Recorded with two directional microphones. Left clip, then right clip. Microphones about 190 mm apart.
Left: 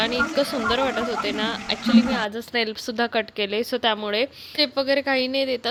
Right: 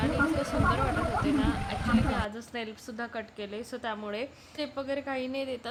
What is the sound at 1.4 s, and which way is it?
Speech, 30° left (ahead or behind).